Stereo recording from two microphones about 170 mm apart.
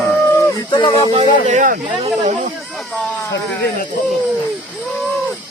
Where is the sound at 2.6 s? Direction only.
Centre (ahead or behind).